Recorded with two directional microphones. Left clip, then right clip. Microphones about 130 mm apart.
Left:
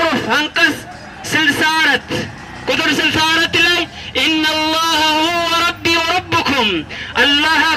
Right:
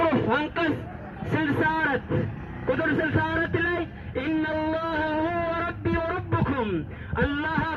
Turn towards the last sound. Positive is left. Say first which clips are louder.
# left 15 dB
turn(degrees=15)  # may be behind; listen again after turning